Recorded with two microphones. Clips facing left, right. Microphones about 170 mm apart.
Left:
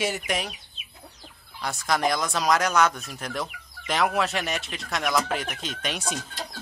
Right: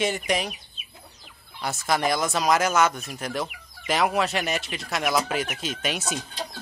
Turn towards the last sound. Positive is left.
turn(degrees=-5)  # may be behind; listen again after turning